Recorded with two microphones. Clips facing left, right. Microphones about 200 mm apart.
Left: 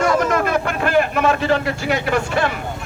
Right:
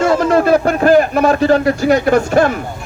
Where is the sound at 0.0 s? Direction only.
30° right (ahead or behind).